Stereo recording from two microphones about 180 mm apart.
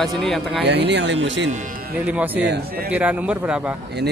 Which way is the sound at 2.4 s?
70° right (ahead or behind).